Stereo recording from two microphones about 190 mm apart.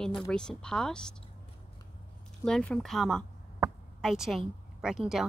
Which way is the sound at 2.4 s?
5° left (ahead or behind).